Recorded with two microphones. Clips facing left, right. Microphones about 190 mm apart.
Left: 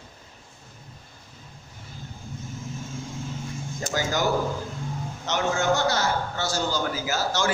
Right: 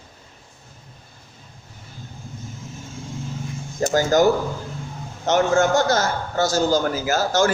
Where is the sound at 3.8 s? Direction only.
45° right (ahead or behind).